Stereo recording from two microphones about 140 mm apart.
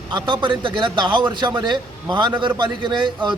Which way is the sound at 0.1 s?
35° right (ahead or behind).